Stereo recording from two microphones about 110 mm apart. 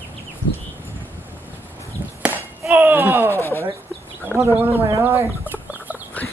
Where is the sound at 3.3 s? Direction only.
20° left (ahead or behind).